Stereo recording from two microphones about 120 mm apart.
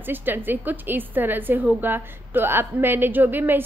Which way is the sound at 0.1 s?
15° right (ahead or behind).